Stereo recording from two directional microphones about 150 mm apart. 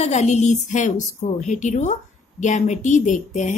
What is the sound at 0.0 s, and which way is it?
A woman's voice, 50° left (ahead or behind).